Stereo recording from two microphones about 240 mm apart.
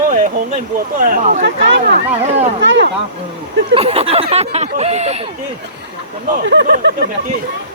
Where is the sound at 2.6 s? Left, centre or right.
Right.